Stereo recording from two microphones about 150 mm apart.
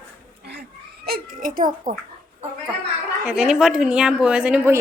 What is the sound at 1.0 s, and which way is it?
Speech, 80° right.